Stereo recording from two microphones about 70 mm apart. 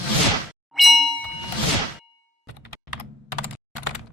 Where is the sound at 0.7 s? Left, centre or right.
Centre.